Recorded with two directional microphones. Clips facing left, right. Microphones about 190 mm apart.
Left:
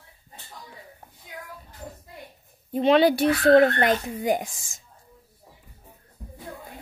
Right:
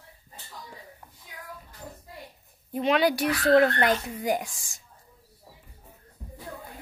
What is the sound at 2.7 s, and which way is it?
Speech, 30° left (ahead or behind).